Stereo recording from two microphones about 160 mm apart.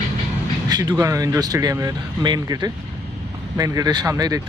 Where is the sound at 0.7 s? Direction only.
25° right (ahead or behind).